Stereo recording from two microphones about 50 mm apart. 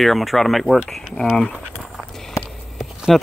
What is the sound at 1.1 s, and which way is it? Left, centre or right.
Speech, centre.